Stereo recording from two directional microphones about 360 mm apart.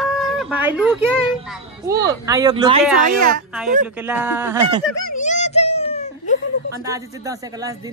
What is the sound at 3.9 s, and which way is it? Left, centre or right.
Speech, centre.